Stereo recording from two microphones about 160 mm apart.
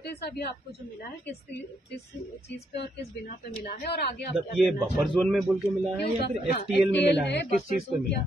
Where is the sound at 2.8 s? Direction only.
75° left (ahead or behind).